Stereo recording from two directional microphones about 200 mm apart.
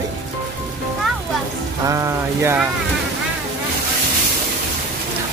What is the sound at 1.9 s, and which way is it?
Speech, 15° right (ahead or behind).